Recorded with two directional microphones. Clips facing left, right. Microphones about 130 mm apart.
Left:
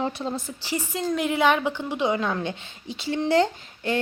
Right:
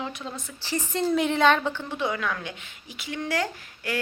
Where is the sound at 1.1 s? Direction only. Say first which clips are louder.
Even; centre (ahead or behind).